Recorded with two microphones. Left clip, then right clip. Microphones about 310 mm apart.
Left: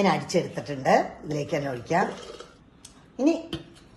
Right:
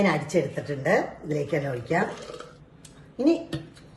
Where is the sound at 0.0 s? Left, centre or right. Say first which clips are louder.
Even; left.